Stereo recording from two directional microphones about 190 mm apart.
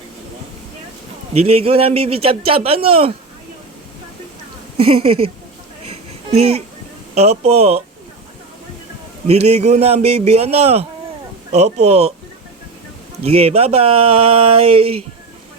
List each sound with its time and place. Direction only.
1.3 s a man's voice: 30° right (ahead or behind)
4.8 s a man's voice: 30° right (ahead or behind)
5.8 s babbling: 30° right (ahead or behind)
7.2 s a man's voice: 35° right (ahead or behind)
9.2 s a man's voice: 35° right (ahead or behind)
13.2 s a man's voice: 30° right (ahead or behind)